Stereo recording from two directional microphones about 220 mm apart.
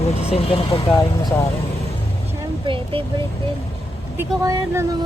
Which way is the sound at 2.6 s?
25° right (ahead or behind).